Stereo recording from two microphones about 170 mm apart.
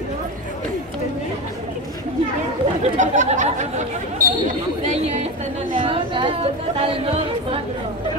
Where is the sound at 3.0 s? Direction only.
45° right (ahead or behind).